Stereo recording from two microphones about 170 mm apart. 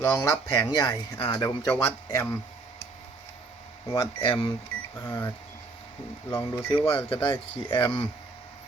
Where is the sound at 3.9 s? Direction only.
30° left (ahead or behind).